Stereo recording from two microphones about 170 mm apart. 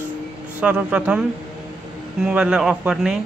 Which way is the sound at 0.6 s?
5° right (ahead or behind).